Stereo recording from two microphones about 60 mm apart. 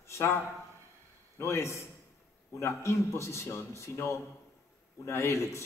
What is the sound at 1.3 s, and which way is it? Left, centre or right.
A man's voice, left.